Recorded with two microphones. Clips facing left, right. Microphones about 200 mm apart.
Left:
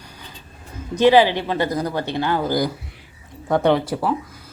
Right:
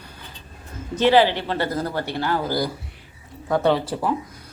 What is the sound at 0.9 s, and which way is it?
Speech, 15° left (ahead or behind).